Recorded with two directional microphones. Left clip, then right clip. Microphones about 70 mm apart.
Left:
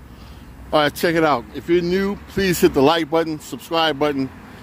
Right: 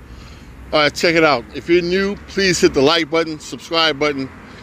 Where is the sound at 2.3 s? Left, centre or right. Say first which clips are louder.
Right 2 dB; left.